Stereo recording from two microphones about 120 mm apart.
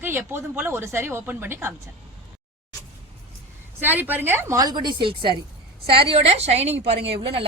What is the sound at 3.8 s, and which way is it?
Speech, 15° right (ahead or behind).